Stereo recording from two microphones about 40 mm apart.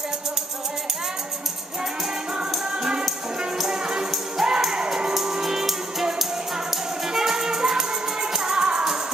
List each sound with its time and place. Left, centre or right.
2.5 s music: centre
4.7 s music: centre
7.1 s music: centre